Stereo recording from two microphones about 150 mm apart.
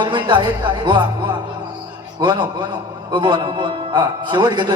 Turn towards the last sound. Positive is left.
turn(degrees=-30)  # may be behind; listen again after turning